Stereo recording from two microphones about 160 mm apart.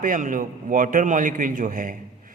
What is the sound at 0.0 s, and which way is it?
A man's voice, 55° right (ahead or behind).